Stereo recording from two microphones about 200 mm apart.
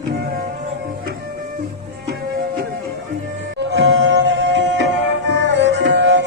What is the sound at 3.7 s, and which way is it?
Music, 60° right (ahead or behind).